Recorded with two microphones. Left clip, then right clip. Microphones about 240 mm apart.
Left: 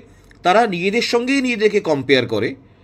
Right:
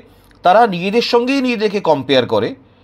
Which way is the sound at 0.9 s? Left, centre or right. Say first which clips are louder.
Right 4 dB; right.